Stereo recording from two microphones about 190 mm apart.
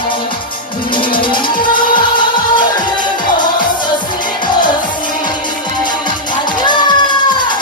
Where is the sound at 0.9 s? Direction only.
25° left (ahead or behind).